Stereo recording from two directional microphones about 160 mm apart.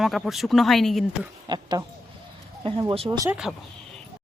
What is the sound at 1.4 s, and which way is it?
Speech, 25° right (ahead or behind).